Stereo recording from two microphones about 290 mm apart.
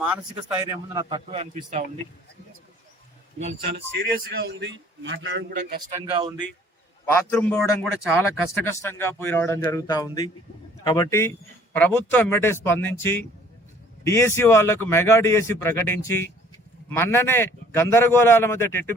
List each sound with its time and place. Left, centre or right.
0.6 s a man's voice: centre
3.3 s a man's voice: right
3.8 s a man's voice: right
6.1 s a man's voice: centre
7.0 s a man's voice: centre